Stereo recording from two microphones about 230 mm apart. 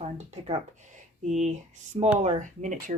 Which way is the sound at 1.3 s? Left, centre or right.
Right.